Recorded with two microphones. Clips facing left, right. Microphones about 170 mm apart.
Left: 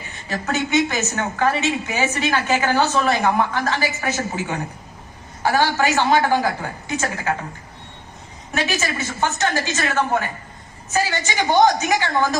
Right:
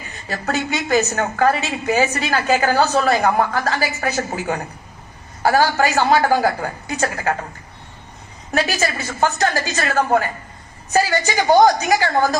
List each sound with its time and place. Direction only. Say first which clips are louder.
0.3 s a woman's voice: even; 35° right (ahead or behind)
8.5 s a woman's voice: right 3 dB; 35° right (ahead or behind)
11.3 s a woman's voice: right 3 dB; 40° right (ahead or behind)